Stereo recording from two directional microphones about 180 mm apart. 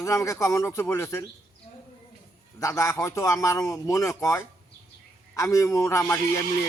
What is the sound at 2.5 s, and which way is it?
A man's voice, 15° left (ahead or behind).